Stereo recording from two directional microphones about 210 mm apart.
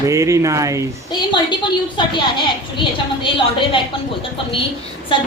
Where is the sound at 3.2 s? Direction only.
25° left (ahead or behind).